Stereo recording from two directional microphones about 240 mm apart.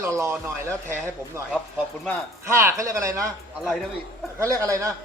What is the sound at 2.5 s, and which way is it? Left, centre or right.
Speech, centre.